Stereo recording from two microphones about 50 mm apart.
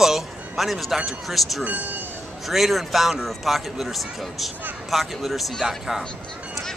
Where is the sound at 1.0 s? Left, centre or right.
Centre.